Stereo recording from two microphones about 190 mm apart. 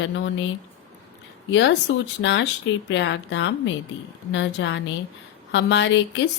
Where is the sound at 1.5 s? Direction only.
75° left (ahead or behind).